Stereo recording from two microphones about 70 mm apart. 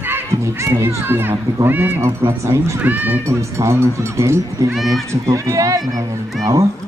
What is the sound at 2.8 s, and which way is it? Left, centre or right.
Speech, right.